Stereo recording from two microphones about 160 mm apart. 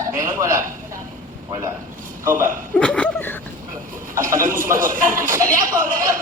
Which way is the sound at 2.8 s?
5° left (ahead or behind).